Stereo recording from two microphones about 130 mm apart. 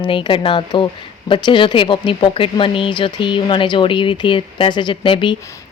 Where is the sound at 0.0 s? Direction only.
40° left (ahead or behind).